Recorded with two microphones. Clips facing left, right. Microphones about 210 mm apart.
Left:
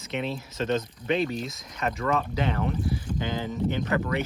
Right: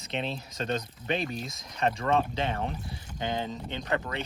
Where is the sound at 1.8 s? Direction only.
30° right (ahead or behind).